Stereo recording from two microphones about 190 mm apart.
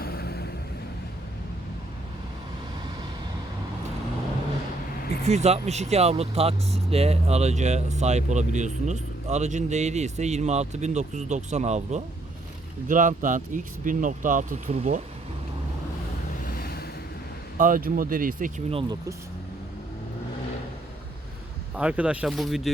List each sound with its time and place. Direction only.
0.0 s vehicle: 55° left (ahead or behind)
5.2 s speech: 35° right (ahead or behind)
16.4 s a sound: 50° left (ahead or behind)
17.6 s speech: 45° right (ahead or behind)
18.7 s speech: 30° right (ahead or behind)
21.8 s speech: 5° right (ahead or behind)